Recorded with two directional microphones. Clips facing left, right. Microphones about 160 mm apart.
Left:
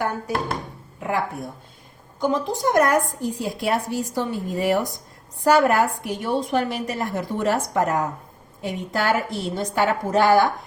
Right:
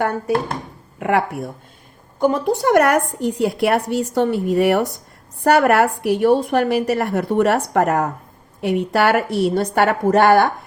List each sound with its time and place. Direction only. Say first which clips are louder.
0.9 s a woman's voice: right 6 dB; 70° right (ahead or behind)
2.1 s a woman's voice: right 5 dB; 60° right (ahead or behind)